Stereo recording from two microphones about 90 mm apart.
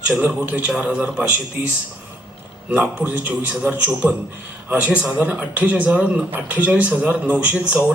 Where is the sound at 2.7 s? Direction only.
15° right (ahead or behind).